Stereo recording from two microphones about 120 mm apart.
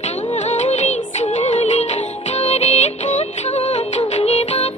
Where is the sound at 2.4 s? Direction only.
65° left (ahead or behind).